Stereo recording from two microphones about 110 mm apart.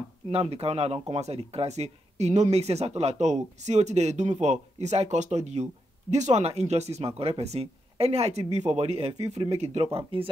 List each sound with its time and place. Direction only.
0.3 s speech: 65° right (ahead or behind)
10.1 s speech: 55° right (ahead or behind)